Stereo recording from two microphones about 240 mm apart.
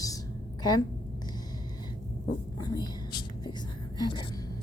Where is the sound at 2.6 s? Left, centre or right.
Centre.